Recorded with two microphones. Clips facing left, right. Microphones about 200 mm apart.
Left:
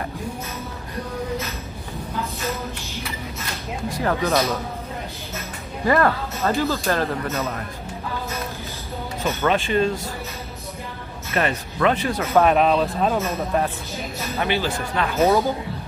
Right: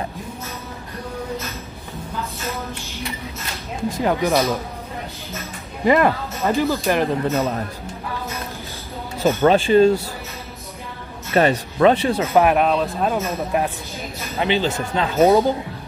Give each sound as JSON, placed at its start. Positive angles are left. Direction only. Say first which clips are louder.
{"t": 4.0, "sound": "speech", "louder": "right 2 dB", "side_deg": -15}
{"t": 5.9, "sound": "speech", "louder": "right 3 dB", "side_deg": -15}
{"t": 7.3, "sound": "speech", "louder": "right 5 dB", "side_deg": -30}
{"t": 9.4, "sound": "speech", "louder": "right 7 dB", "side_deg": -30}
{"t": 11.4, "sound": "speech", "louder": "right 6 dB", "side_deg": -35}
{"t": 12.4, "sound": "speech", "louder": "even", "side_deg": -5}